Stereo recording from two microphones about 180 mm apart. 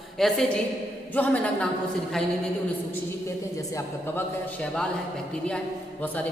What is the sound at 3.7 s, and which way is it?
A man's voice, 10° left (ahead or behind).